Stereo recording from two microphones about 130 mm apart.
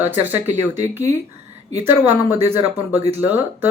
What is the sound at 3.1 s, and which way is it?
Speech, 15° right (ahead or behind).